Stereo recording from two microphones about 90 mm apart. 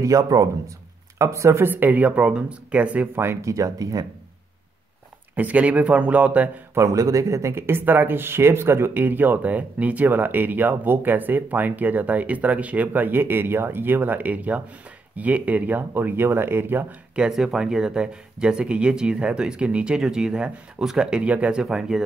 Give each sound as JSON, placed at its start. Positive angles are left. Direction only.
{"t": 0.0, "sound": "speech", "side_deg": -35}
{"t": 3.2, "sound": "speech", "side_deg": -30}
{"t": 5.3, "sound": "speech", "side_deg": -15}
{"t": 6.7, "sound": "speech", "side_deg": -35}
{"t": 17.1, "sound": "speech", "side_deg": -5}